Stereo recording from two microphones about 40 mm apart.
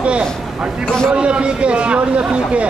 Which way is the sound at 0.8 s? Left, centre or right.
Centre.